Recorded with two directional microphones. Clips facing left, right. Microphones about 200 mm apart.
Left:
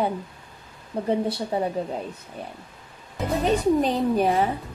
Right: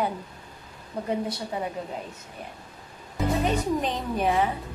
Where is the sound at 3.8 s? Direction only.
35° left (ahead or behind).